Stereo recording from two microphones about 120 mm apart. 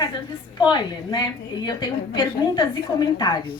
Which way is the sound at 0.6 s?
35° left (ahead or behind).